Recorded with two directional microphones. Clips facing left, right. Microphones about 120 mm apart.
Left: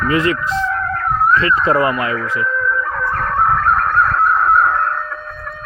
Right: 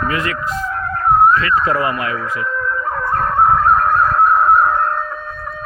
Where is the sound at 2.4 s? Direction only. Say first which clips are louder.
Left 2 dB; 25° right (ahead or behind).